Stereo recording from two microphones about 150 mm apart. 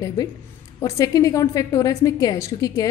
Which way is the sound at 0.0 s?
25° left (ahead or behind).